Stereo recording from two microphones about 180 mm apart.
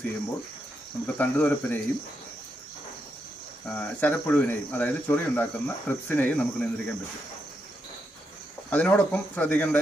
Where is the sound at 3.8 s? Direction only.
10° left (ahead or behind).